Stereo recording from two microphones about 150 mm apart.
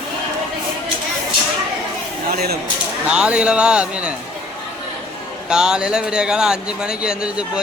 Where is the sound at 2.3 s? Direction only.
90° right.